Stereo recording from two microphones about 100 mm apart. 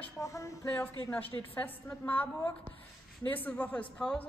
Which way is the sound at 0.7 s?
20° left (ahead or behind).